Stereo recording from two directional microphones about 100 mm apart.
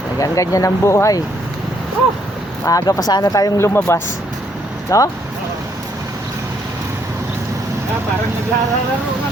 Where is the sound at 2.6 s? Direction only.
30° left (ahead or behind).